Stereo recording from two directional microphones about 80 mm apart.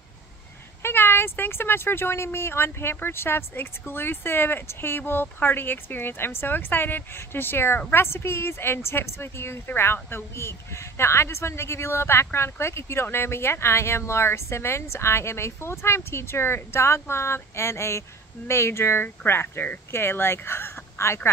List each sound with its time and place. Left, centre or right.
0.8 s a woman's voice: left